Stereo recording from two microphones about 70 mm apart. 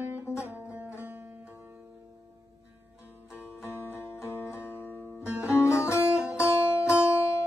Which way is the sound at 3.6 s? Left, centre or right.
Left.